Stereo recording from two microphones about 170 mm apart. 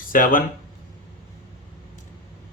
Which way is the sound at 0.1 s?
55° left (ahead or behind).